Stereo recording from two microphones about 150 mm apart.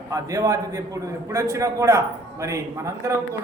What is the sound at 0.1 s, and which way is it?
A man's voice, 20° right (ahead or behind).